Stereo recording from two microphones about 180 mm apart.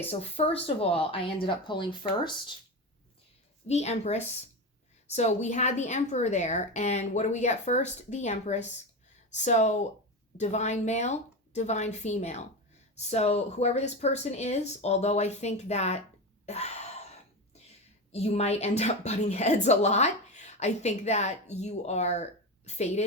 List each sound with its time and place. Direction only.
0.1 s a woman's voice: 35° left (ahead or behind)
3.7 s a woman's voice: 35° left (ahead or behind)
16.5 s wail: 35° left (ahead or behind)
18.1 s a woman's voice: 35° left (ahead or behind)